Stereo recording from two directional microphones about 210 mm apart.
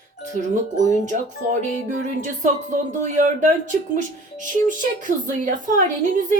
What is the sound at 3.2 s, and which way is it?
A woman's voice, 35° right (ahead or behind).